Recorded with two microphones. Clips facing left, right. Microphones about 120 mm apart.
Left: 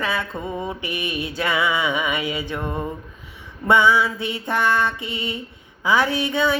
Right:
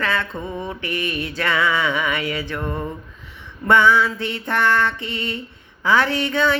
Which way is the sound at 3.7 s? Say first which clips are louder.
Right 1 dB; 15° left (ahead or behind).